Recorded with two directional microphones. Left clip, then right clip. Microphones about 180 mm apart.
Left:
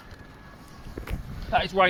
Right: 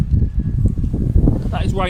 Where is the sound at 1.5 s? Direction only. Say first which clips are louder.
Left 2 dB; 40° right (ahead or behind).